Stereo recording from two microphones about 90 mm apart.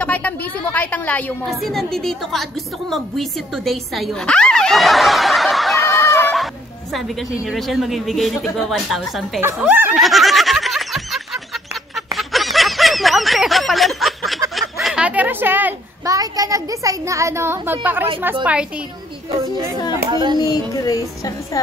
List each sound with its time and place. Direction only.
0.0 s a woman's voice: 20° left (ahead or behind)
1.4 s a woman's voice: centre (ahead or behind)
4.3 s snicker: 10° left (ahead or behind)
7.4 s a woman's voice: centre (ahead or behind)
9.9 s a sound: centre (ahead or behind)
12.1 s snicker: centre (ahead or behind)
14.5 s a sound: centre (ahead or behind)
15.0 s a sound: 20° right (ahead or behind)
16.1 s a child's voice: 40° right (ahead or behind); by 18.7 s 15° right (ahead or behind)
19.9 s speech: 55° right (ahead or behind)
20.3 s music: 45° left (ahead or behind)